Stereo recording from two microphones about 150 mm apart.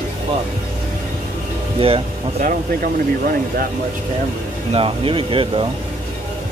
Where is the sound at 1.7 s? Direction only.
40° right (ahead or behind).